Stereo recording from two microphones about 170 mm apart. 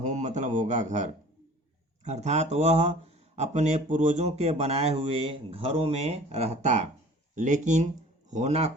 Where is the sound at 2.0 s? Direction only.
40° right (ahead or behind).